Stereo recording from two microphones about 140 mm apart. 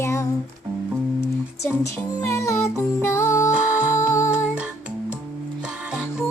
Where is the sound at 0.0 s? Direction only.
20° left (ahead or behind).